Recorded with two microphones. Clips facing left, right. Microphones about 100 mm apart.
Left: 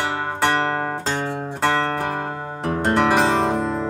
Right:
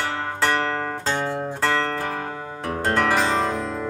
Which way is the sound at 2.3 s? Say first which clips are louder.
Left 4 dB; 45° left (ahead or behind).